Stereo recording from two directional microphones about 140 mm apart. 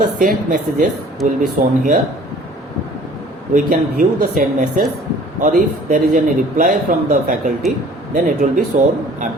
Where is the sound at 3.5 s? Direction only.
80° right.